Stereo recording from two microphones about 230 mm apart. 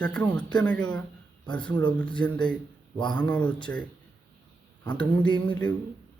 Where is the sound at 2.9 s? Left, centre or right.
Centre.